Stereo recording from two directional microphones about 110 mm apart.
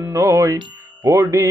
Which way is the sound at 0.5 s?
35° right (ahead or behind).